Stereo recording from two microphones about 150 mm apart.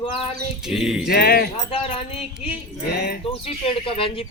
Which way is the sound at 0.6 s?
5° right (ahead or behind).